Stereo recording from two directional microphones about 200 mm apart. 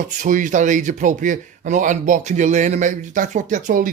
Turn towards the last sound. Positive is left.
turn(degrees=-40)  # may be behind; listen again after turning